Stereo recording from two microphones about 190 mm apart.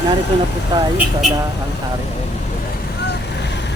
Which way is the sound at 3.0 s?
65° left (ahead or behind).